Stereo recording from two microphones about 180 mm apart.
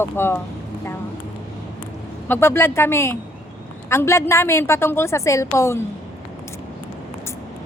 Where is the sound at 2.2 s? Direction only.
10° left (ahead or behind).